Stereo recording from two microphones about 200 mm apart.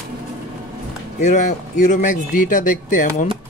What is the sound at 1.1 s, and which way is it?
A man's voice, 35° left (ahead or behind).